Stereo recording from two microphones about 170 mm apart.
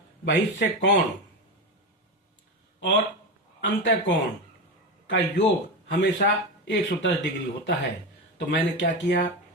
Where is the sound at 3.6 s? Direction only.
90° left.